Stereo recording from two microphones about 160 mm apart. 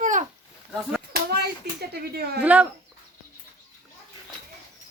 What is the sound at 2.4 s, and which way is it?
Speech, 10° right (ahead or behind).